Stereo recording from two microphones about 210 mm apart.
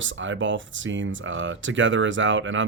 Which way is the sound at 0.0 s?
65° right (ahead or behind).